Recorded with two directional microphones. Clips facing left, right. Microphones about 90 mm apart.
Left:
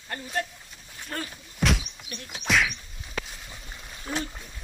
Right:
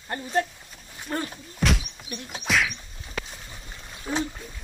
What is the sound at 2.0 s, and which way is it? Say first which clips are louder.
Speech: right 4 dB; 20° right (ahead or behind).